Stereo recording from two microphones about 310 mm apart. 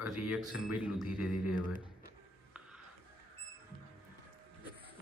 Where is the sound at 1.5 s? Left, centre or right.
Left.